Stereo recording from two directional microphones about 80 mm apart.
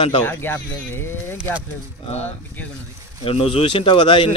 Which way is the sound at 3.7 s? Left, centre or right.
Left.